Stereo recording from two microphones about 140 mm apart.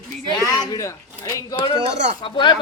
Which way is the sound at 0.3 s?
25° left (ahead or behind).